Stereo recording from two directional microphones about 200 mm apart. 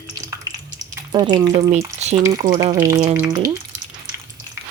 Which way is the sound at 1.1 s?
20° right (ahead or behind).